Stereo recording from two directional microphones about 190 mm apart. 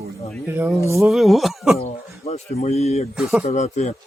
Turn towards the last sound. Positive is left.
turn(degrees=35)  # may be behind; listen again after turning